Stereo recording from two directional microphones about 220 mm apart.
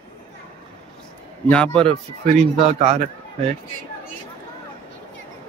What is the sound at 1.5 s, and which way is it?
Speech, 5° left (ahead or behind).